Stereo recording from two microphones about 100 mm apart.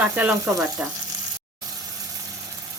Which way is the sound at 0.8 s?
15° right (ahead or behind).